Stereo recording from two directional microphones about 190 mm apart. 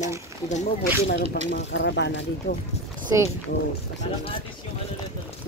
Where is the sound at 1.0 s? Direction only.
65° left (ahead or behind).